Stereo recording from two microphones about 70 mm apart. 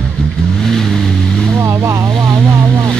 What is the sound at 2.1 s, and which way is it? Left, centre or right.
Vehicle, right.